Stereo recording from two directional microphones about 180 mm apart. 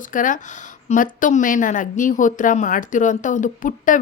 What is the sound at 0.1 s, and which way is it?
Speech, 45° left (ahead or behind).